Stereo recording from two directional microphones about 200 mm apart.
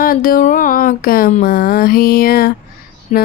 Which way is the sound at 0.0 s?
45° left (ahead or behind).